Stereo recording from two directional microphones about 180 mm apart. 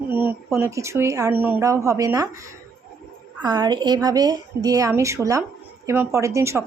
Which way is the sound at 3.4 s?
25° right (ahead or behind).